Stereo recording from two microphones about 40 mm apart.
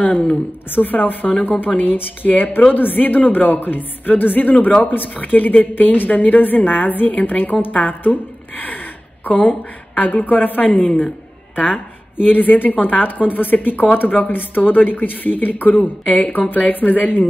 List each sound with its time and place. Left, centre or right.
0.0 s a woman's voice: left
0.7 s a woman's voice: left